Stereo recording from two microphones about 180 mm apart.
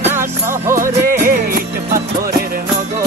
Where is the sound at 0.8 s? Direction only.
50° right (ahead or behind).